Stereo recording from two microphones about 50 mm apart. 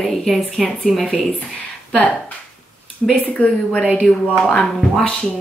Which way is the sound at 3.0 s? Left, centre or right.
Centre.